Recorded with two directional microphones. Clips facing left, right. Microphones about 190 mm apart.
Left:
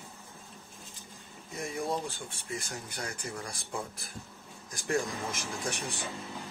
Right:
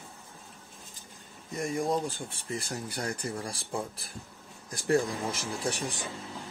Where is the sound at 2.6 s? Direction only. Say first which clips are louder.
Right 5 dB; 35° right (ahead or behind).